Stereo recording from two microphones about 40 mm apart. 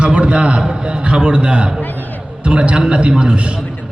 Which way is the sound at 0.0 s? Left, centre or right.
Right.